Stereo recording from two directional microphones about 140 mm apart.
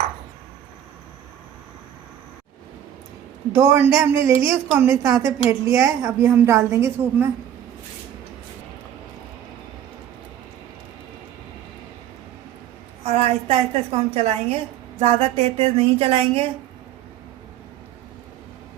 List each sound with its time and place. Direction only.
3.5 s a woman's voice: 20° right (ahead or behind)
13.1 s a woman's voice: 50° right (ahead or behind)